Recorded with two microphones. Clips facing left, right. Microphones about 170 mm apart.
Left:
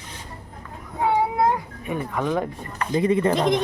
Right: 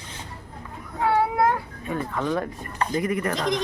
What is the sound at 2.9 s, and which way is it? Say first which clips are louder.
Speech: left 7 dB; 25° left (ahead or behind).